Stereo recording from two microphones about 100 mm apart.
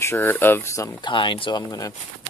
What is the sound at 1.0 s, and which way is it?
Speech, 55° left (ahead or behind).